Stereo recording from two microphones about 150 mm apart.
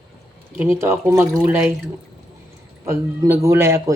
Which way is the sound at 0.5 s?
20° right (ahead or behind).